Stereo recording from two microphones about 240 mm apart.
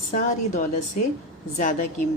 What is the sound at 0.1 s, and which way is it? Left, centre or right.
A woman's voice, left.